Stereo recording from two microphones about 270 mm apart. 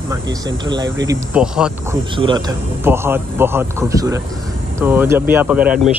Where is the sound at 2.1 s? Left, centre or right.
Centre.